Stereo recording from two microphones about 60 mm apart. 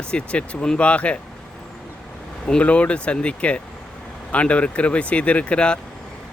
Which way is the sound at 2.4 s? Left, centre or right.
Centre.